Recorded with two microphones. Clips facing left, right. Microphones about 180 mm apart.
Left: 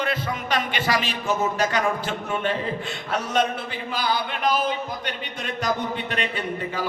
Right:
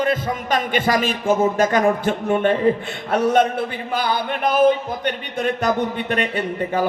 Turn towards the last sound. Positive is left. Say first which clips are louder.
# right 6 dB
turn(degrees=-50)  # may be behind; listen again after turning